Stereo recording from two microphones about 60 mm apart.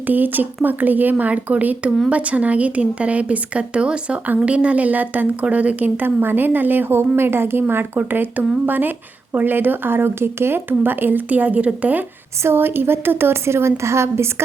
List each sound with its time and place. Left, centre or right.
0.1 s a woman's voice: right
12.4 s a woman's voice: right